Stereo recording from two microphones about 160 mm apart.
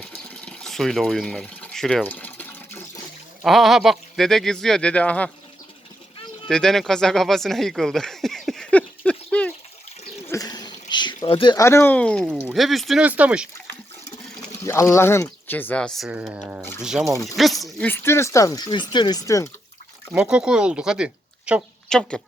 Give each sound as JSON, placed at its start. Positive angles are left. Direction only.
{"t": 0.0, "sound": "water", "side_deg": 10}
{"t": 3.4, "sound": "speech", "side_deg": 0}
{"t": 6.5, "sound": "speech", "side_deg": 5}
{"t": 10.2, "sound": "a sound", "side_deg": 20}
{"t": 11.5, "sound": "speech", "side_deg": 20}
{"t": 14.5, "sound": "speech", "side_deg": 15}
{"t": 17.8, "sound": "speech", "side_deg": 15}
{"t": 20.1, "sound": "speech", "side_deg": -5}
{"t": 21.8, "sound": "speech", "side_deg": 5}